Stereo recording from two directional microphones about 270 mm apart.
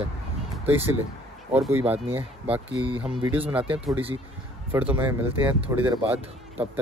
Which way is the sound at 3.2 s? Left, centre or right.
Centre.